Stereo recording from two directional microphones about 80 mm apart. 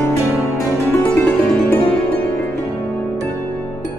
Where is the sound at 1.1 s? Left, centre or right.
Centre.